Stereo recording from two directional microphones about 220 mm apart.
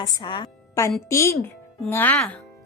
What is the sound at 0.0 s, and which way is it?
A woman's voice, 20° left (ahead or behind).